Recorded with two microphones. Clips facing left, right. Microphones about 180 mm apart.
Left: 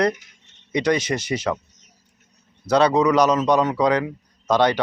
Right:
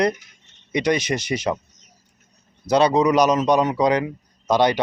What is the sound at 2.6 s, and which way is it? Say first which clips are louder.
Speech: even; 15° right (ahead or behind).